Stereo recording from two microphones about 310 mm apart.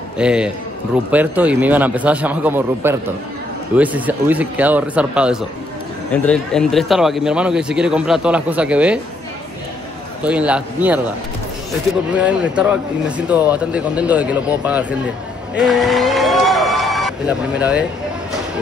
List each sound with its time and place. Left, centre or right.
0.2 s speech: centre
10.2 s speech: centre
12.1 s speech: centre